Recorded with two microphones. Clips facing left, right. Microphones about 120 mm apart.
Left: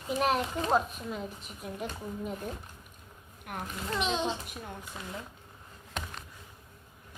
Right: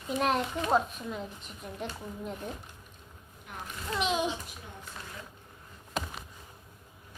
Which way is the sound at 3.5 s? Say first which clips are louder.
Left 5 dB; 55° left (ahead or behind).